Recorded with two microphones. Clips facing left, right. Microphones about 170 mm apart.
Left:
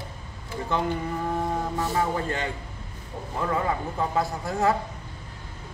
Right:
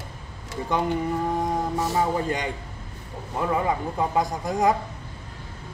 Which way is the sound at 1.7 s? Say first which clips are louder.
Right 2 dB; 15° right (ahead or behind).